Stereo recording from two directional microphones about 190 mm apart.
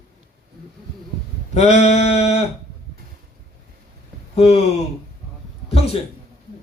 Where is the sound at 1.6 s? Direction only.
35° left (ahead or behind).